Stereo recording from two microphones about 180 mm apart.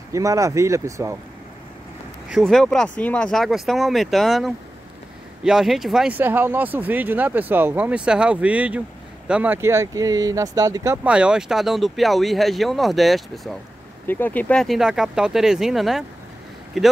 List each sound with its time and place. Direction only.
0.1 s speech: 15° right (ahead or behind)
2.3 s speech: centre (ahead or behind); by 11.0 s 20° right (ahead or behind)
11.1 s speech: 5° right (ahead or behind)